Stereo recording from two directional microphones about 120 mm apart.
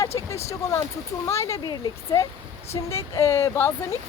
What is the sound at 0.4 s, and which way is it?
A woman's voice, 25° left (ahead or behind).